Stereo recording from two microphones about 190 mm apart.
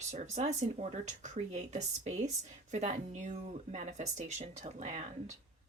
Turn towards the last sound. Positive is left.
turn(degrees=-40)  # may be behind; listen again after turning